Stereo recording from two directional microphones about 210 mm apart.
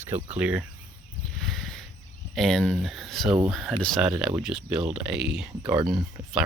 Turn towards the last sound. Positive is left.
turn(degrees=-5)  # may be behind; listen again after turning